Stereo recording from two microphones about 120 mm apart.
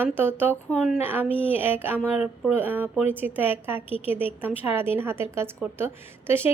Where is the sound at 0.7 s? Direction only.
5° right (ahead or behind).